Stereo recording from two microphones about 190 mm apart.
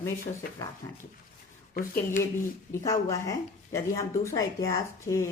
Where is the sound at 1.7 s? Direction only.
50° left (ahead or behind).